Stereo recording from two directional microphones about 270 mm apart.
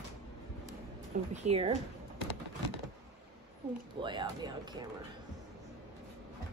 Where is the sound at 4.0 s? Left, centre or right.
Centre.